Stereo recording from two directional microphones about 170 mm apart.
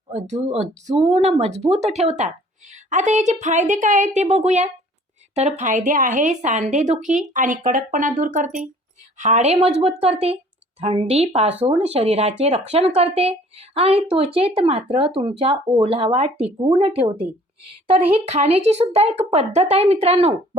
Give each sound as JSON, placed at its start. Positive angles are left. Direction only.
{"t": 0.1, "sound": "speech", "side_deg": -40}